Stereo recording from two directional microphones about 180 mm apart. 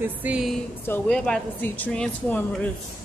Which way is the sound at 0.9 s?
5° left (ahead or behind).